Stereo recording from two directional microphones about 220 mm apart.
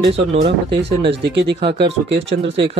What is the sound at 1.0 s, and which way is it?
Speech, 50° right (ahead or behind).